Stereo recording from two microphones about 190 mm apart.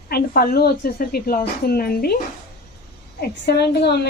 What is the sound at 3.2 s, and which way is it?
Speech, 60° left (ahead or behind).